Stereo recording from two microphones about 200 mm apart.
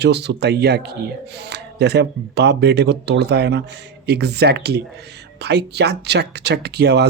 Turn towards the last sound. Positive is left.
turn(degrees=-55)  # may be behind; listen again after turning